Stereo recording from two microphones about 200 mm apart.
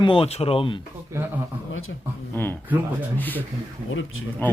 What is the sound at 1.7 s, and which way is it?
Speech, 90° left.